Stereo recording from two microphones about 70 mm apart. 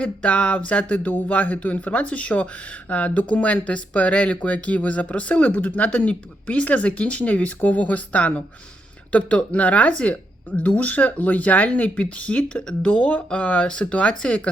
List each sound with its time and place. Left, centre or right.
0.0 s speech: centre